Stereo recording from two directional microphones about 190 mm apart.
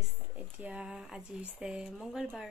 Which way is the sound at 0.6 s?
5° right (ahead or behind).